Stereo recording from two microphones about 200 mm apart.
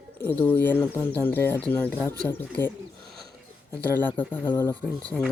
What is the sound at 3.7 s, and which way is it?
Speech, 10° left (ahead or behind).